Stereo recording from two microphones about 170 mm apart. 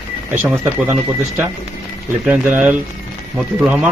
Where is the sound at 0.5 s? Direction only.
15° right (ahead or behind).